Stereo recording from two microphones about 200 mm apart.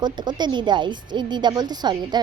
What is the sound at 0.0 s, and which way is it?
Speech, 20° right (ahead or behind).